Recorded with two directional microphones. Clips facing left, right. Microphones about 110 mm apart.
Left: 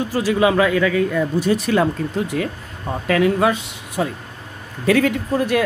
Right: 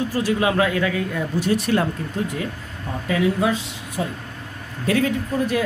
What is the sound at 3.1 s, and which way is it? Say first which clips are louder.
Speech: left 4 dB; 65° left (ahead or behind).